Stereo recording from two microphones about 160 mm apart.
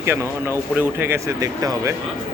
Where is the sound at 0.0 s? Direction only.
15° right (ahead or behind).